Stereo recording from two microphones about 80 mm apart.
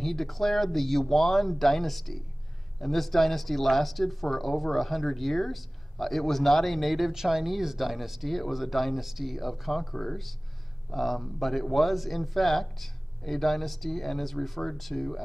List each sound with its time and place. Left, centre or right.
0.0 s speech: centre